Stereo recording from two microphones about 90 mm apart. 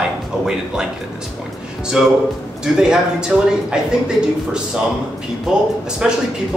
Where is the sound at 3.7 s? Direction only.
10° right (ahead or behind).